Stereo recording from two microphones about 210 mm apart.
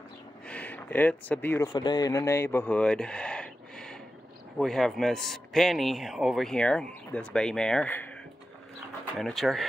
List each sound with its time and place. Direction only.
0.5 s a man's voice: 5° left (ahead or behind)